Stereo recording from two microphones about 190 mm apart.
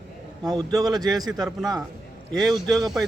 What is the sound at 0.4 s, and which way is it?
Speech, 20° right (ahead or behind).